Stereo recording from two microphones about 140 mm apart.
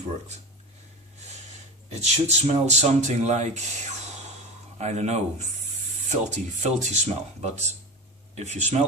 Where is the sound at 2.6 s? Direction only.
55° right (ahead or behind).